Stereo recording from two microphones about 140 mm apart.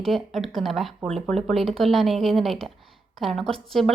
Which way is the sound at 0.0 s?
Centre (ahead or behind).